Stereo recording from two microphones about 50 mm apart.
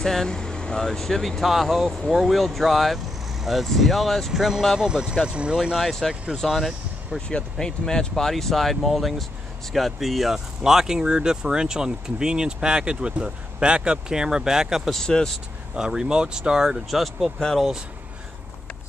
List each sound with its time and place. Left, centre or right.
0.0 s speech: centre
6.3 s speech: centre
7.2 s speech: centre
14.9 s speech: centre
15.7 s speech: centre